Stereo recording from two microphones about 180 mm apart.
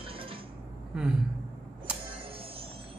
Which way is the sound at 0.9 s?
5° right (ahead or behind).